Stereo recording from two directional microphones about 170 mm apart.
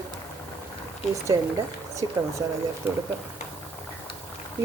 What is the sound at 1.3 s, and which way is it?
Speech, 25° right (ahead or behind).